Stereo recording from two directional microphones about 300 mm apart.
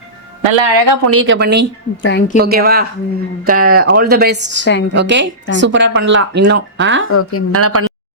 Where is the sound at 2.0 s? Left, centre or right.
Left.